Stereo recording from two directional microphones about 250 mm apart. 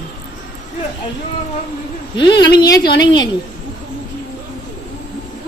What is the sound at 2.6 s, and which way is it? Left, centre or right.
Speech, centre.